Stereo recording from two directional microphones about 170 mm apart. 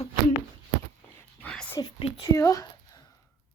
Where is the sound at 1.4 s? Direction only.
10° left (ahead or behind).